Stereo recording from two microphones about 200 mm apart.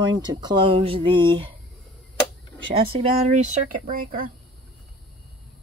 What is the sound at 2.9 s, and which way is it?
Speech, 40° right (ahead or behind).